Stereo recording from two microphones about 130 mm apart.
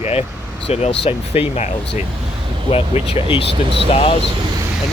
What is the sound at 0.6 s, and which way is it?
Speech, 50° left (ahead or behind).